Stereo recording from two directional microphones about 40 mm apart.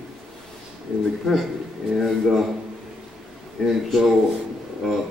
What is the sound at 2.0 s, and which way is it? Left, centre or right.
Speech, centre.